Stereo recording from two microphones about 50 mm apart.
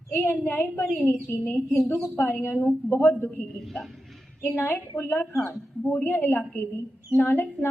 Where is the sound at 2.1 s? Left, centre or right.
Left.